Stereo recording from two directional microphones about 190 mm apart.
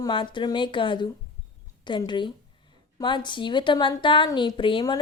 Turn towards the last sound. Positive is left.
turn(degrees=25)  # may be behind; listen again after turning